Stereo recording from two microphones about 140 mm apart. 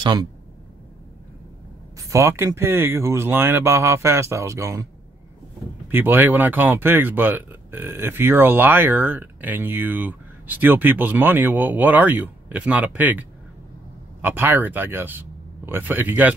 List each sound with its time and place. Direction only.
0.0 s speech: 30° right (ahead or behind)
2.0 s speech: 20° right (ahead or behind)
5.9 s speech: 15° right (ahead or behind)